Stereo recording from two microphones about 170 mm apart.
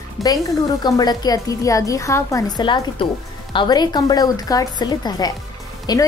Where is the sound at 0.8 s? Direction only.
25° left (ahead or behind).